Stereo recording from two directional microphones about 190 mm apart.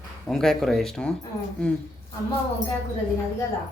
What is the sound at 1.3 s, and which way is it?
Speech, 15° left (ahead or behind).